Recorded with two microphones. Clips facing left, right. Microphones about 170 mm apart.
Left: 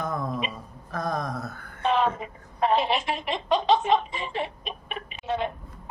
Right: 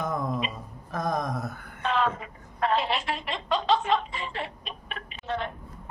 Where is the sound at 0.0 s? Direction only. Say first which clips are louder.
Even; 20° right (ahead or behind).